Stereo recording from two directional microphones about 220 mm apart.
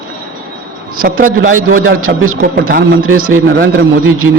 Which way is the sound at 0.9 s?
40° right (ahead or behind).